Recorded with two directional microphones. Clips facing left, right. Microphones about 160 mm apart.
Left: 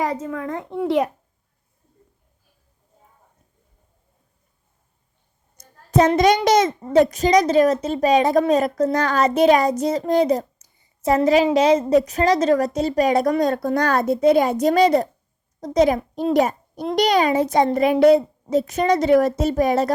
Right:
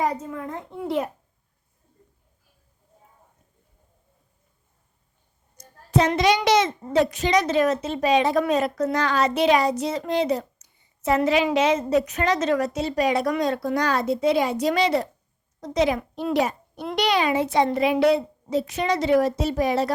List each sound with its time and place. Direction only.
0.0 s a child's voice: 90° left
5.5 s a sound: 45° left (ahead or behind)
6.1 s a child's voice: 45° left (ahead or behind)